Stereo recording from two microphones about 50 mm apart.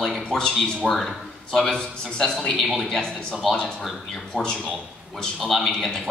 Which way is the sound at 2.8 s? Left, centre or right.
Centre.